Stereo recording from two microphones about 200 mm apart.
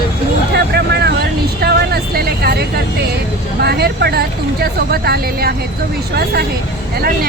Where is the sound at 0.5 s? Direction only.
55° right (ahead or behind).